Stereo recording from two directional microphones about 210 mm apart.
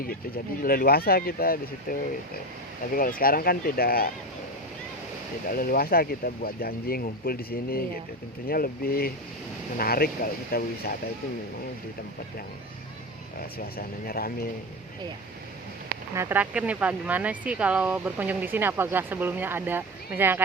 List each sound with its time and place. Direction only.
0.6 s speech: 45° left (ahead or behind)
5.5 s speech: 40° left (ahead or behind)
13.7 s speech: 45° left (ahead or behind)
16.1 s speech: 10° right (ahead or behind)